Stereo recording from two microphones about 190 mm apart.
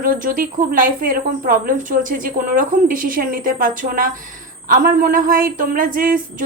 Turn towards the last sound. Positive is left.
turn(degrees=-45)  # may be behind; listen again after turning